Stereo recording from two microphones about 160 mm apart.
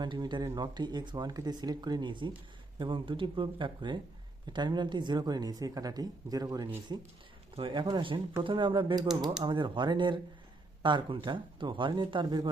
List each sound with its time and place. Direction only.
0.0 s speech: 30° right (ahead or behind)